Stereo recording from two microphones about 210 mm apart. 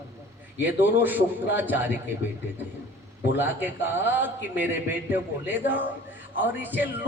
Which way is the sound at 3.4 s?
10° right (ahead or behind).